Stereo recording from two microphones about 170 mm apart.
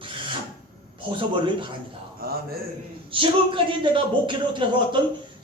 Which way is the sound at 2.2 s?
60° right (ahead or behind).